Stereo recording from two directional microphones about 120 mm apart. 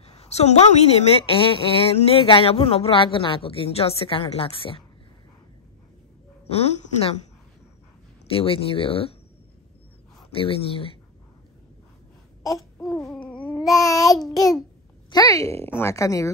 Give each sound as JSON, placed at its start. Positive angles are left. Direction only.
{"t": 0.0, "sound": "a woman's voice", "side_deg": 60}
{"t": 6.4, "sound": "a woman's voice", "side_deg": 60}
{"t": 8.3, "sound": "a woman's voice", "side_deg": 50}
{"t": 10.3, "sound": "a woman's voice", "side_deg": 50}
{"t": 13.3, "sound": "babbling", "side_deg": 15}
{"t": 13.7, "sound": "a woman's voice", "side_deg": 30}